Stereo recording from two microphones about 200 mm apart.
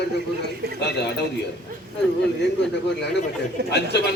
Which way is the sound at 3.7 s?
55° left (ahead or behind).